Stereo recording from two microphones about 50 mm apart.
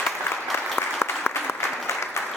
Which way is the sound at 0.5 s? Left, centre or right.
Left.